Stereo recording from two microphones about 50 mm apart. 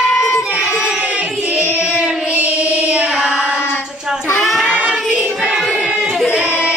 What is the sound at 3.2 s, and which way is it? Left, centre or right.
Child singing, centre.